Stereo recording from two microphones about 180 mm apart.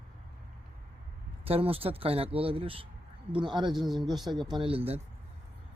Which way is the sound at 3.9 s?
25° right (ahead or behind).